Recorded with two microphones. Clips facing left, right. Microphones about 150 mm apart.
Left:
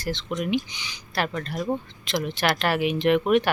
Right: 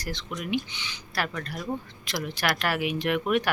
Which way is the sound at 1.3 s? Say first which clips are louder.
Left 5 dB; 25° left (ahead or behind).